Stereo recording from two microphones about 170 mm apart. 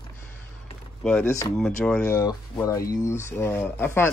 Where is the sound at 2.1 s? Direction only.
20° left (ahead or behind).